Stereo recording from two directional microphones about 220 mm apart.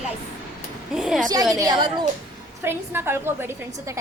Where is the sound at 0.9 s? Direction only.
Centre (ahead or behind).